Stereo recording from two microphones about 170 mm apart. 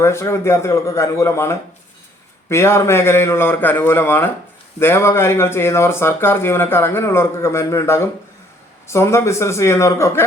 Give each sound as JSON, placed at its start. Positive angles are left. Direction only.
{"t": 0.0, "sound": "speech", "side_deg": 15}